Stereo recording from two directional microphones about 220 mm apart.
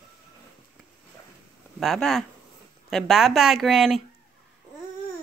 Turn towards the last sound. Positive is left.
turn(degrees=0)  # may be behind; listen again after turning